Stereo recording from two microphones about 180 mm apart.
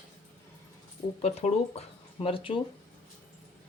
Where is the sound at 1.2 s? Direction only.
35° left (ahead or behind).